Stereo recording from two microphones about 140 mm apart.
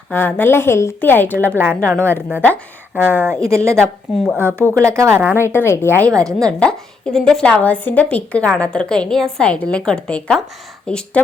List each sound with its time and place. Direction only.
0.1 s a woman's voice: 15° left (ahead or behind)
1.5 s a woman's voice: 15° right (ahead or behind)
5.5 s a woman's voice: 20° left (ahead or behind)
6.1 s speech: 25° right (ahead or behind)
6.6 s a woman's voice: 5° left (ahead or behind)